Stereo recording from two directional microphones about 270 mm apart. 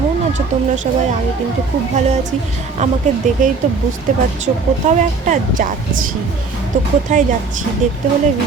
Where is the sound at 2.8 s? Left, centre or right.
Right.